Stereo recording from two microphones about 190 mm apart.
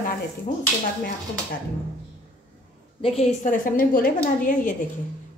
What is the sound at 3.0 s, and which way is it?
A woman's voice, 40° left (ahead or behind).